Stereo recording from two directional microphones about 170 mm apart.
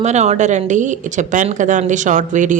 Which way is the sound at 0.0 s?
40° right (ahead or behind).